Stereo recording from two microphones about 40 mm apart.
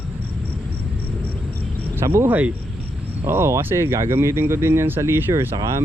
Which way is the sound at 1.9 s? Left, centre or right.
Right.